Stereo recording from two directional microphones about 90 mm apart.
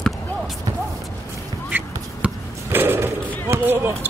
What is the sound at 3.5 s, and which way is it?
Basketball bounce, 25° right (ahead or behind).